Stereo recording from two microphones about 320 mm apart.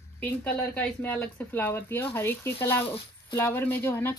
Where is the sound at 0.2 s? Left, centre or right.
Centre.